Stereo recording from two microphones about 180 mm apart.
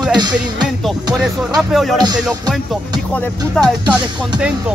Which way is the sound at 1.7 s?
Centre (ahead or behind).